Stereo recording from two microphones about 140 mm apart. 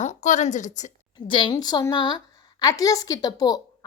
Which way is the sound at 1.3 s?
35° left (ahead or behind).